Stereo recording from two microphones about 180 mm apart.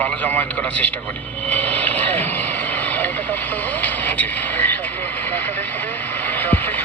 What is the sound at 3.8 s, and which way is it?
Vehicle, 10° left (ahead or behind).